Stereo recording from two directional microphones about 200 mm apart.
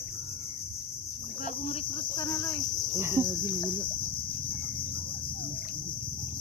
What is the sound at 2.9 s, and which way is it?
Cricket, 15° right (ahead or behind).